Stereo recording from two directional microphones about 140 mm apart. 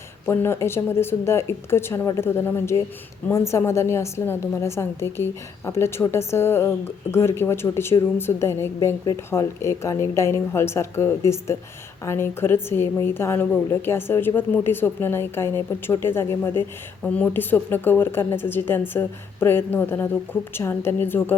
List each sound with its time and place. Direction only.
0.3 s a woman's voice: 20° left (ahead or behind)